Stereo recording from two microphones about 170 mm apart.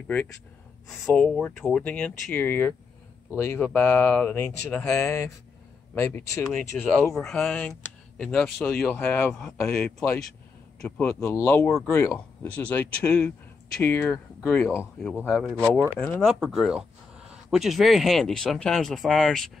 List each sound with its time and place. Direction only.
1.0 s speech: 5° left (ahead or behind)
7.2 s speech: 5° left (ahead or behind)
11.1 s speech: 15° left (ahead or behind)
15.1 s speech: 5° right (ahead or behind)